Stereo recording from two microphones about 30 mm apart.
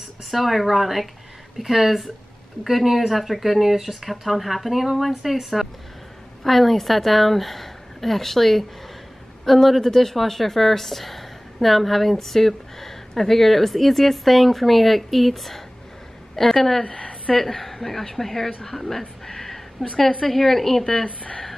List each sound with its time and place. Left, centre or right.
0.3 s a woman's voice: centre
16.9 s a sound: left
17.4 s a woman's voice: centre